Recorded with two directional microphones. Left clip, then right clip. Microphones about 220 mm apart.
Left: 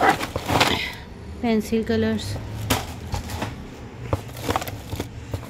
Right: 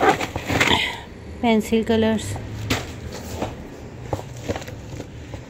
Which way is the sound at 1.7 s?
10° right (ahead or behind).